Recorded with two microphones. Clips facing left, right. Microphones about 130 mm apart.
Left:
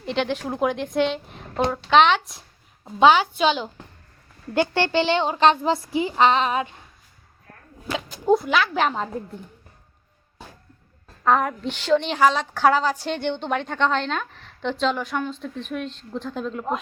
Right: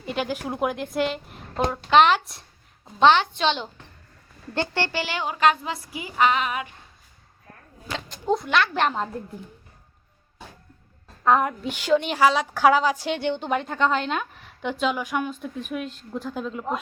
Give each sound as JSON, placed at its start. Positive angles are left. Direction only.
{"t": 0.0, "sound": "a woman's voice", "side_deg": -5}
{"t": 7.9, "sound": "a woman's voice", "side_deg": 5}
{"t": 11.2, "sound": "a woman's voice", "side_deg": -5}